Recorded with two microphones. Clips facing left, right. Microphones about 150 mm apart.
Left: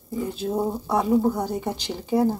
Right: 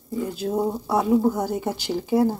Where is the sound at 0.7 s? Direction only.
Centre (ahead or behind).